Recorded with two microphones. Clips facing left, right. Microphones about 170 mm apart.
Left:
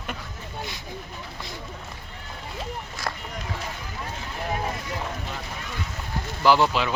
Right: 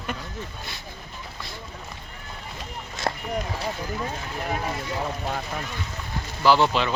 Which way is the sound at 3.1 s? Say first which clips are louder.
Right 5 dB; 30° right (ahead or behind).